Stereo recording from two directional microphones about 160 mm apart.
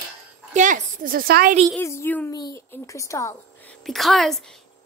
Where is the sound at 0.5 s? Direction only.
55° right (ahead or behind); by 1.5 s 70° right (ahead or behind).